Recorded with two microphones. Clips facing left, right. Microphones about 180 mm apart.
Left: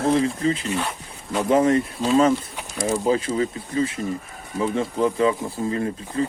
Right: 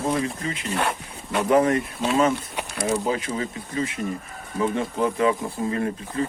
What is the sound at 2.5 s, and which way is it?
Snake, 70° right (ahead or behind).